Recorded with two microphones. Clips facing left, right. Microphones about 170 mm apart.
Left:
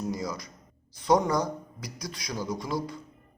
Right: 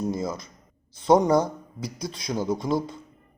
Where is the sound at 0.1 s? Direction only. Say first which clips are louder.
Right 4 dB; 25° right (ahead or behind).